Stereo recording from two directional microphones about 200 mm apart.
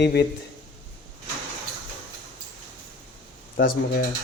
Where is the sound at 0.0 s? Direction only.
55° left (ahead or behind).